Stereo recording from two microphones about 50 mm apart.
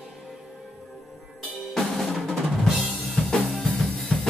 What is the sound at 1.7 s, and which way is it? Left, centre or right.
Drum, centre.